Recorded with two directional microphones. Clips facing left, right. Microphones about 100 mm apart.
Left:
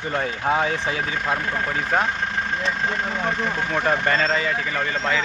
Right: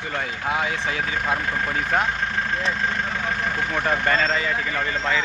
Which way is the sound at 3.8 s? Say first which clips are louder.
Left 1 dB; 5° left (ahead or behind).